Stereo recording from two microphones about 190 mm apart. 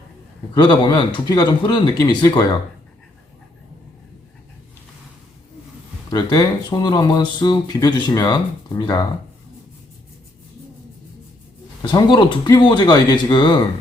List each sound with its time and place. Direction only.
0.5 s speech: 25° left (ahead or behind)
6.1 s speech: 20° left (ahead or behind)
11.8 s speech: 20° left (ahead or behind)